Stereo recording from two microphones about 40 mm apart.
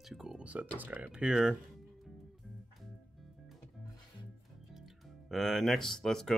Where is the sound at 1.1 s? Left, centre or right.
Right.